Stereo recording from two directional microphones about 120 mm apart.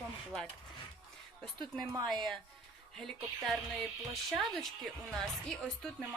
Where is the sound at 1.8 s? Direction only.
30° right (ahead or behind).